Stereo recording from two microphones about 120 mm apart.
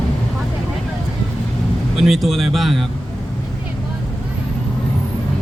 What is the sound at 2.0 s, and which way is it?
Speech, centre (ahead or behind).